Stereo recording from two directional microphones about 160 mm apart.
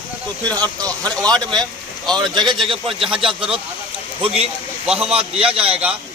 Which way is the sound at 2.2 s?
30° right (ahead or behind).